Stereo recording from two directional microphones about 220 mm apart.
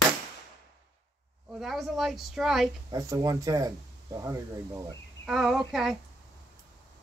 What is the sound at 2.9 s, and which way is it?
Speech, 15° right (ahead or behind).